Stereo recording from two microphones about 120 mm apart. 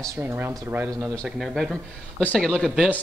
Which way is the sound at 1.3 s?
5° right (ahead or behind).